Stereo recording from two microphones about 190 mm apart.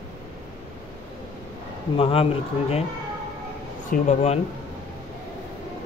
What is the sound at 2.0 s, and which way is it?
Speech, 30° left (ahead or behind).